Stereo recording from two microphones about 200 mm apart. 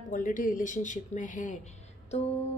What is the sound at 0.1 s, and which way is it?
A woman's voice, 40° left (ahead or behind).